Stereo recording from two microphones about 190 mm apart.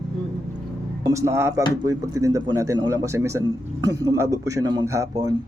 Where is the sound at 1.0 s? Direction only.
15° right (ahead or behind).